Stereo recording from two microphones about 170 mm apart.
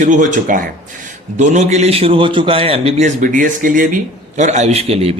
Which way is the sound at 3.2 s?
50° right (ahead or behind).